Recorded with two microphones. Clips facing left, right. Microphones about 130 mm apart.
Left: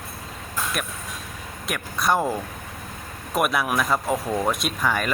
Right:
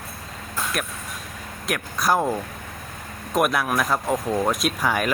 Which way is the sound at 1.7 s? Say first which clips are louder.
Right 1 dB; centre (ahead or behind).